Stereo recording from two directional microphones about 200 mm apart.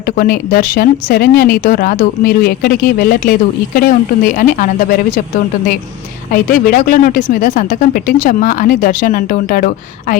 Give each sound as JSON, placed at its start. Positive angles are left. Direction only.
{"t": 0.2, "sound": "speech", "side_deg": 45}
{"t": 6.3, "sound": "speech", "side_deg": 45}